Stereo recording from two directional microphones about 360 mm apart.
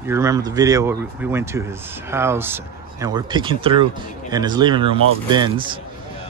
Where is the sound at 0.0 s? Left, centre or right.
Centre.